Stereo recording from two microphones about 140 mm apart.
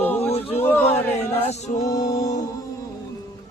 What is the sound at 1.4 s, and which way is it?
Male singing, 50° left (ahead or behind).